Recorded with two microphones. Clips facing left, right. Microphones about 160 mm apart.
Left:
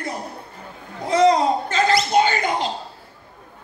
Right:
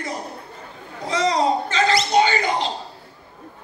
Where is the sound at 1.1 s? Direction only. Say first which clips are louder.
Left 4 dB; 55° left (ahead or behind).